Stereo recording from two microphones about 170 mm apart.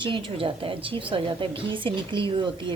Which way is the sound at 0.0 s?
30° right (ahead or behind).